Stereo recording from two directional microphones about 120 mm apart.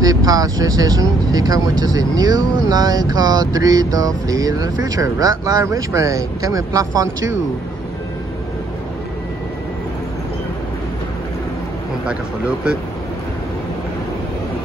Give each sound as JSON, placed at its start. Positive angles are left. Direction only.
{"t": 0.0, "sound": "speech", "side_deg": -30}
{"t": 12.1, "sound": "speech", "side_deg": -10}